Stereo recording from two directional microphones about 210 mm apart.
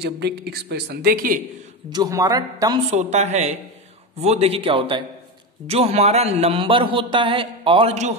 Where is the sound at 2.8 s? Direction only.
35° right (ahead or behind).